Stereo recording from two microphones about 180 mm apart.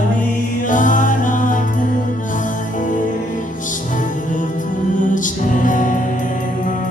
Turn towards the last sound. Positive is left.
turn(degrees=45)  # may be behind; listen again after turning